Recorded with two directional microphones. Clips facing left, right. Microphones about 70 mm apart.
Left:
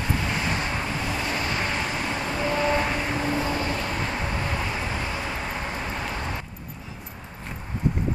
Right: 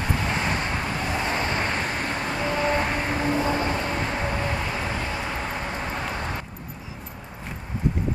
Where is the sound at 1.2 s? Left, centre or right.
Right.